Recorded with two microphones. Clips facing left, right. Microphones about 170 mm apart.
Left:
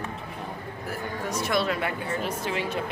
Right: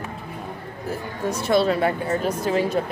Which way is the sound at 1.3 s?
30° right (ahead or behind).